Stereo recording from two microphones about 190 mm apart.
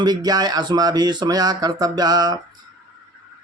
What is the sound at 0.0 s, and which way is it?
Speech, 20° right (ahead or behind).